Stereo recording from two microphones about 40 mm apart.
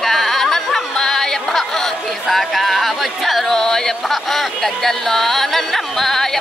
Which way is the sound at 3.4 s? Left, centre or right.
Centre.